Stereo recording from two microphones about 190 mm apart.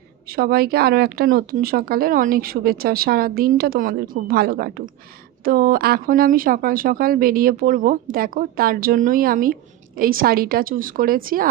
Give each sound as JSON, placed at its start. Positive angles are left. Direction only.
{"t": 0.3, "sound": "speech", "side_deg": -55}